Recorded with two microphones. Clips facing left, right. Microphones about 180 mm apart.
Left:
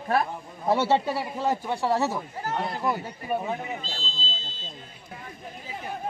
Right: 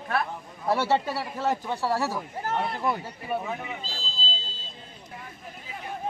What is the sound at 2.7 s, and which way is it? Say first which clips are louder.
Speech: left 1 dB; 5° left (ahead or behind).